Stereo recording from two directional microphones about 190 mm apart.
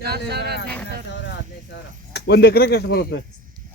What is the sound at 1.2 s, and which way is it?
Speech, 65° left (ahead or behind).